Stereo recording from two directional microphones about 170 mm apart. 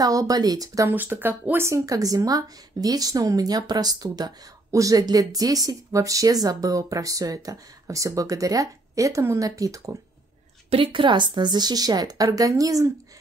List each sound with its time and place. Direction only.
0.0 s speech: 20° right (ahead or behind)
10.7 s speech: 30° right (ahead or behind)